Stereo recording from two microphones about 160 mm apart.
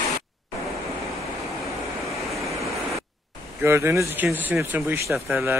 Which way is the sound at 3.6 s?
15° right (ahead or behind).